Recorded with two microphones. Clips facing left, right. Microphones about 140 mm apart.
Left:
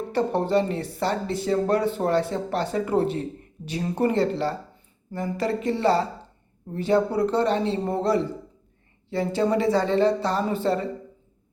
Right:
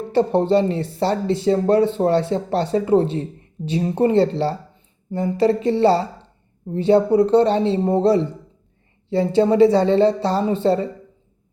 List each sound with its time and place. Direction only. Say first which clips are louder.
0.1 s speech: right 6 dB; 30° right (ahead or behind)